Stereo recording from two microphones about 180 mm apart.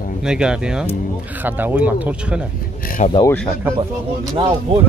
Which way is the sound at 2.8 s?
50° left (ahead or behind).